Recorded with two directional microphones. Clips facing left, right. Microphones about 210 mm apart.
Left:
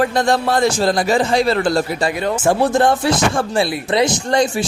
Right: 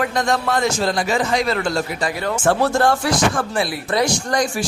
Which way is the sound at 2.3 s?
10° left (ahead or behind).